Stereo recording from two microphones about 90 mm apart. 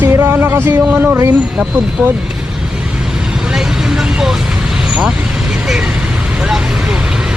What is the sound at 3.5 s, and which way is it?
Vehicle, 5° right (ahead or behind).